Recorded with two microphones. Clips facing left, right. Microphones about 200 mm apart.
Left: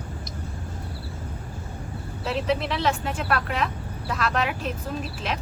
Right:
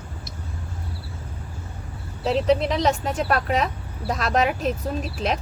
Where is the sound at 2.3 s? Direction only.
35° right (ahead or behind).